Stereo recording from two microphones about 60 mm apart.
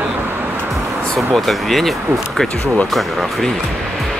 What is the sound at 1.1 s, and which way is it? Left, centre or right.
Speech, centre.